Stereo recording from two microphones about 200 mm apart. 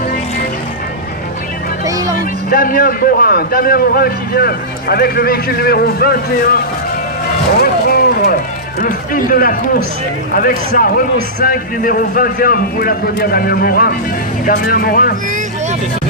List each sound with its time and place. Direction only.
1.8 s music: 15° right (ahead or behind)
2.1 s a man's voice: 45° left (ahead or behind)
7.6 s a sound: 50° left (ahead or behind)
8.8 s a man's voice: 45° left (ahead or behind)